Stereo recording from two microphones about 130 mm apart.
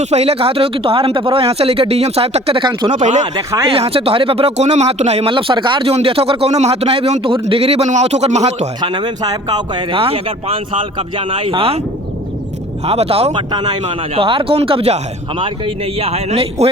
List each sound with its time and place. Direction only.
0.0 s speech: 55° right (ahead or behind); by 3.0 s 35° right (ahead or behind)
3.0 s speech: 65° right (ahead or behind)
3.3 s speech: 25° right (ahead or behind)
3.7 s speech: 45° right (ahead or behind)
8.8 s speech: 35° right (ahead or behind)
9.9 s speech: 45° right (ahead or behind)
12.8 s speech: 50° right (ahead or behind)
13.5 s speech: 35° right (ahead or behind)
13.8 s speech: 45° right (ahead or behind)